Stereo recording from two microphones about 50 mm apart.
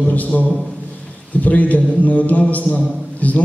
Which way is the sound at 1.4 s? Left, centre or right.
Left.